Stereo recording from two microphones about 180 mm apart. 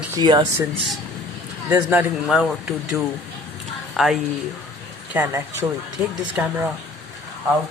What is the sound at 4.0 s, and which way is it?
A man's voice, centre (ahead or behind).